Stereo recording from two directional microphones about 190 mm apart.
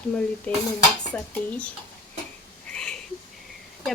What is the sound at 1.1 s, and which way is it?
Speech, 10° left (ahead or behind).